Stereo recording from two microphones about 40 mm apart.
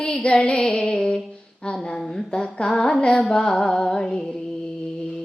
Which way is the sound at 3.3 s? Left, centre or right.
Centre.